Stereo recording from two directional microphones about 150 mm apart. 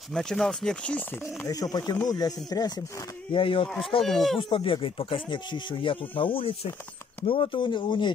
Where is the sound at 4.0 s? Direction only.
Centre (ahead or behind).